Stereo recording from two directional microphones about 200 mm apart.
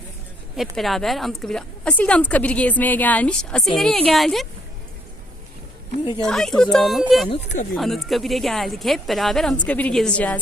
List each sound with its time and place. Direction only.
0.5 s speech: centre (ahead or behind)
6.2 s speech: centre (ahead or behind)
7.3 s speech: 35° left (ahead or behind)
7.7 s speech: centre (ahead or behind)